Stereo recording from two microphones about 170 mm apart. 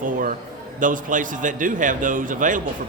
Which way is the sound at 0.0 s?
50° right (ahead or behind).